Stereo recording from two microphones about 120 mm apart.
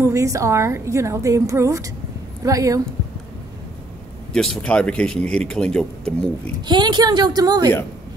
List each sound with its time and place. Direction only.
0.0 s a woman's voice: 25° right (ahead or behind)
4.3 s speech: 5° left (ahead or behind)
6.6 s a woman's voice: 40° right (ahead or behind)